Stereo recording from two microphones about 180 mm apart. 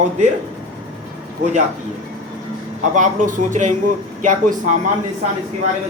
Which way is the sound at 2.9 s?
45° right (ahead or behind).